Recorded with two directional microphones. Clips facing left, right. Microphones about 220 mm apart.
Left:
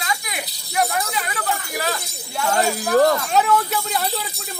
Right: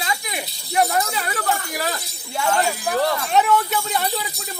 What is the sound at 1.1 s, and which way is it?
Speech, 40° right (ahead or behind).